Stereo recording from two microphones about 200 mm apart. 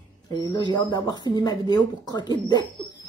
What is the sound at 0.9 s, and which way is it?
Speech, 20° left (ahead or behind).